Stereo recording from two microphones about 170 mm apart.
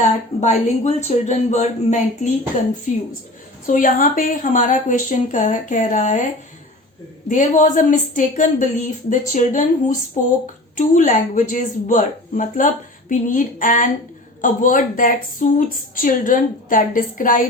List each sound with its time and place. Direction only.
0.3 s speech: 40° left (ahead or behind)
3.7 s speech: 55° left (ahead or behind)